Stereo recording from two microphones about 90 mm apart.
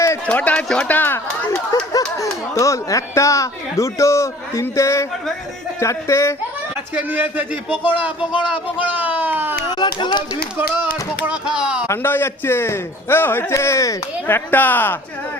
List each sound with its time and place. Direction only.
0.3 s speech: 15° left (ahead or behind)
1.7 s speech: 45° left (ahead or behind)
6.9 s speech: 20° right (ahead or behind)
9.6 s a sound: 55° left (ahead or behind)
11.3 s speech: 10° right (ahead or behind)
11.9 s a man's voice: 25° left (ahead or behind)
14.3 s a man's voice: 20° left (ahead or behind)